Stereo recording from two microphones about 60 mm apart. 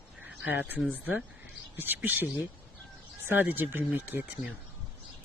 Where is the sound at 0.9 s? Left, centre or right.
Right.